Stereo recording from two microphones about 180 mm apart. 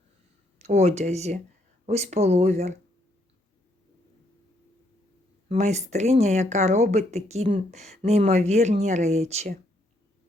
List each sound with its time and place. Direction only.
0.6 s speech: 40° right (ahead or behind)
5.5 s speech: 40° right (ahead or behind)